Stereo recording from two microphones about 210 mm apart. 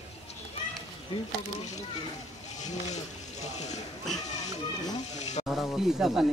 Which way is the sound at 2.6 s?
35° left (ahead or behind).